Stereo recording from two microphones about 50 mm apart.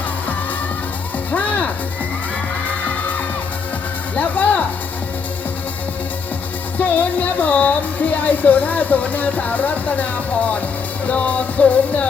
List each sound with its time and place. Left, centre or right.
1.3 s music: left
4.1 s music: left
6.7 s music: left
8.1 s speech: left
11.0 s music: left